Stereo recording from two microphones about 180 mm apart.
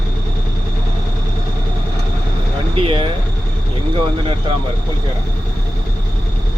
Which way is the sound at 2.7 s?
30° right (ahead or behind).